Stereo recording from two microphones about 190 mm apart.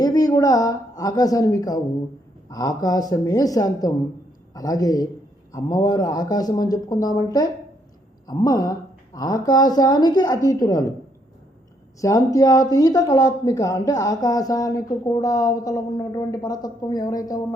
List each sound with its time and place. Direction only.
0.0 s a woman's voice: 20° left (ahead or behind)
11.9 s speech: 15° left (ahead or behind)